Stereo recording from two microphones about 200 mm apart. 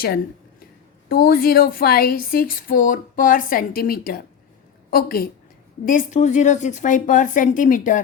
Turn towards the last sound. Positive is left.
turn(degrees=40)  # may be behind; listen again after turning